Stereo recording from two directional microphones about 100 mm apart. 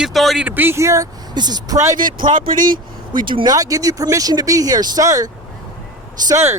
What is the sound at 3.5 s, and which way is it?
Speech, 35° right (ahead or behind).